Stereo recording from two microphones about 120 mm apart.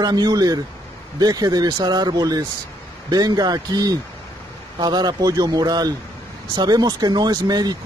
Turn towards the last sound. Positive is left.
turn(degrees=-35)  # may be behind; listen again after turning